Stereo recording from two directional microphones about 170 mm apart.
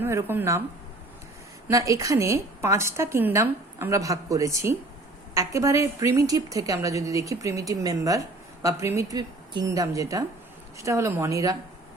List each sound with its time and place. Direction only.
0.0 s a woman's voice: 15° right (ahead or behind)
1.6 s a woman's voice: 20° right (ahead or behind)